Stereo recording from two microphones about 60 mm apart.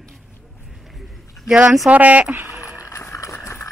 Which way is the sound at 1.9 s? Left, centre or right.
Right.